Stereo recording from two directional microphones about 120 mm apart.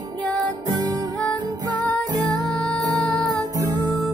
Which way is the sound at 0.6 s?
30° right (ahead or behind).